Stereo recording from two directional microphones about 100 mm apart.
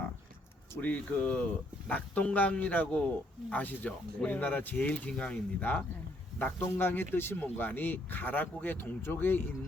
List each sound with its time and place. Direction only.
0.8 s speech: 15° left (ahead or behind)